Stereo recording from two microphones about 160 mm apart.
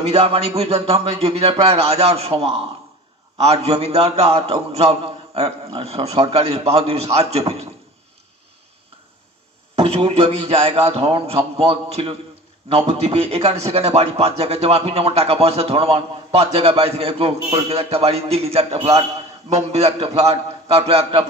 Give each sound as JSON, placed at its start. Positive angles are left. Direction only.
{"t": 0.1, "sound": "a man's voice", "side_deg": -40}
{"t": 9.8, "sound": "a man's voice", "side_deg": -35}